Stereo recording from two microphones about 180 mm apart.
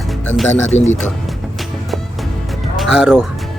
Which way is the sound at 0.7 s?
40° left (ahead or behind).